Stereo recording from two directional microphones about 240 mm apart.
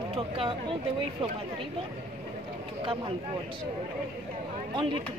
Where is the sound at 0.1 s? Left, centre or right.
Right.